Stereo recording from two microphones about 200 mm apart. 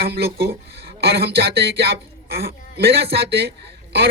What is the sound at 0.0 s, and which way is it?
Speech, 50° right (ahead or behind).